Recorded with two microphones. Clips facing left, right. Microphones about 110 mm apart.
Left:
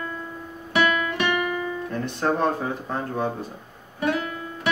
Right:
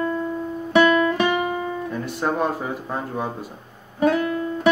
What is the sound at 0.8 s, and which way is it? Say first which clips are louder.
Guitar: right 6 dB; 35° right (ahead or behind).